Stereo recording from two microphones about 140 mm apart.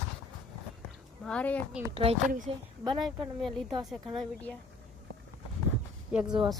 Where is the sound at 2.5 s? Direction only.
45° right (ahead or behind).